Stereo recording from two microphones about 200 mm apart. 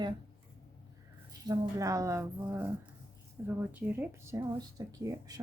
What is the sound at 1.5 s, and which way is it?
Speech, 15° right (ahead or behind).